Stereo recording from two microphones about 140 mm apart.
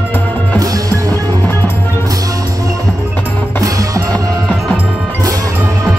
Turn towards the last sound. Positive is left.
turn(degrees=-25)  # may be behind; listen again after turning